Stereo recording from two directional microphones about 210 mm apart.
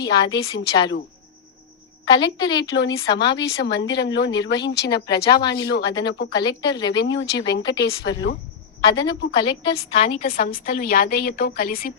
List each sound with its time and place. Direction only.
0.0 s a woman's voice: 20° left (ahead or behind)
2.0 s a woman's voice: 20° left (ahead or behind)
2.7 s a woman's voice: 60° left (ahead or behind)
4.9 s a woman's voice: 20° left (ahead or behind)
5.5 s a woman's voice: 60° left (ahead or behind)
6.3 s a woman's voice: 20° left (ahead or behind)
6.9 s a woman's voice: 55° left (ahead or behind)
8.8 s a woman's voice: 20° left (ahead or behind)
10.2 s a woman's voice: 45° left (ahead or behind)